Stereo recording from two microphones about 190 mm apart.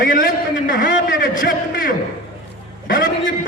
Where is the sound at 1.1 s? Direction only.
45° left (ahead or behind).